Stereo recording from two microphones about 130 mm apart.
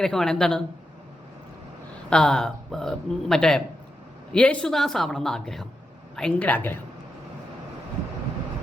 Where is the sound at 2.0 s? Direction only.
5° left (ahead or behind).